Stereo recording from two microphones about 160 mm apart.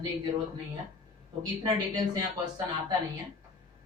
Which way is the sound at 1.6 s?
25° right (ahead or behind).